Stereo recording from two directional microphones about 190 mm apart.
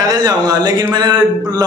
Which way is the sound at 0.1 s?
20° right (ahead or behind).